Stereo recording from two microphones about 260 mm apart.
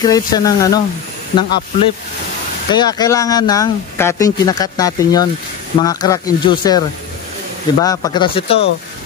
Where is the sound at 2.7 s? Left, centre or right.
Centre.